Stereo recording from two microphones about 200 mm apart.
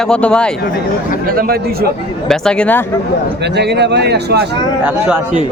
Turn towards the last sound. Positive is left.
turn(degrees=-55)  # may be behind; listen again after turning